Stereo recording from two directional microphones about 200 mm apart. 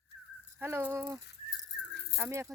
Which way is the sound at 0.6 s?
10° right (ahead or behind).